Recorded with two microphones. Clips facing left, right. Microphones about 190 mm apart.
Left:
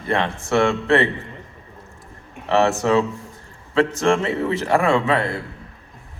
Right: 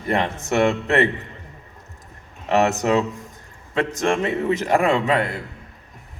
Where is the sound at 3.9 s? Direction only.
20° right (ahead or behind).